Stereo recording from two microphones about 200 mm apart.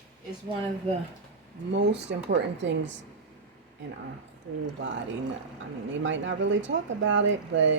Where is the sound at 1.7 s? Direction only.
60° right (ahead or behind).